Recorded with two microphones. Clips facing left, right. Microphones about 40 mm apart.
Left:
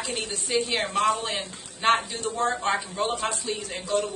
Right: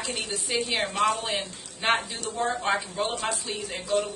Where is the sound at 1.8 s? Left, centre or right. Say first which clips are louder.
Left 3 dB; centre.